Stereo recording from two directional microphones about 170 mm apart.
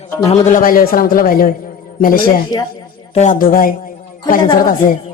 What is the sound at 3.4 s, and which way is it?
A man's voice, 55° left (ahead or behind).